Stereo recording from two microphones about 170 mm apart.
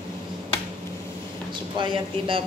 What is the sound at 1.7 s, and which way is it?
Speech, 30° right (ahead or behind).